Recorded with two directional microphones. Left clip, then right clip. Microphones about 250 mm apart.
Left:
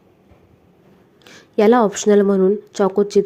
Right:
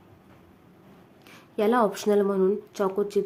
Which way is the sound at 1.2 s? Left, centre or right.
Left.